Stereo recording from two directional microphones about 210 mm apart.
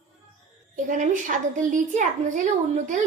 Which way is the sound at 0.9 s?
35° right (ahead or behind).